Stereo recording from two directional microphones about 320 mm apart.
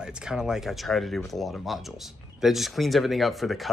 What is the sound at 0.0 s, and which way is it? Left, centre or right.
Speech, centre.